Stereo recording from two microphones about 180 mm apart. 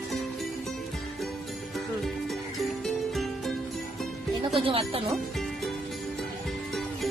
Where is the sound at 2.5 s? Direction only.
Centre (ahead or behind).